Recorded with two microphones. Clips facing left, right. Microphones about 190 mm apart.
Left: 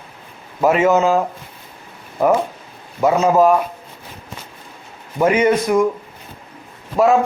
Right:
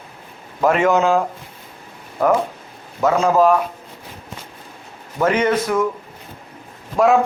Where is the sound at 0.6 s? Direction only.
5° left (ahead or behind).